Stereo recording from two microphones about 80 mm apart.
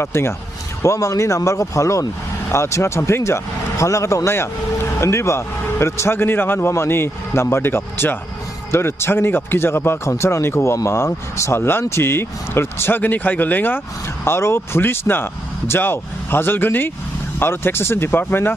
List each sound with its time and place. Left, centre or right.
0.0 s a man's voice: left